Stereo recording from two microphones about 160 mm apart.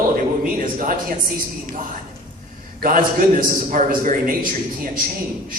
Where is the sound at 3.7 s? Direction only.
55° right (ahead or behind).